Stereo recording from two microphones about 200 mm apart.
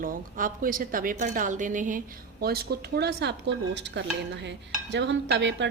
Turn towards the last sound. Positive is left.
turn(degrees=-65)  # may be behind; listen again after turning